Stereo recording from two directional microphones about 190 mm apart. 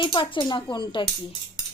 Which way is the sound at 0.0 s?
25° left (ahead or behind).